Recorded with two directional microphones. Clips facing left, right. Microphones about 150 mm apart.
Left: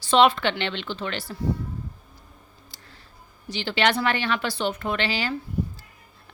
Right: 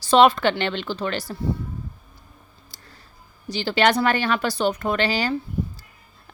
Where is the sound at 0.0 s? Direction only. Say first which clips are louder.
Right 3 dB; 40° right (ahead or behind).